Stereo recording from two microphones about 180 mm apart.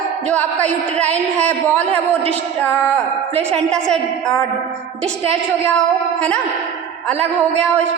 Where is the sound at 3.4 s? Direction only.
5° left (ahead or behind).